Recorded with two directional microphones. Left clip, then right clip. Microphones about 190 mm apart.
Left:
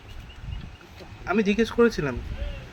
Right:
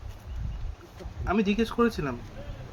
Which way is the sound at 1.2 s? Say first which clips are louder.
Left 3 dB; 5° left (ahead or behind).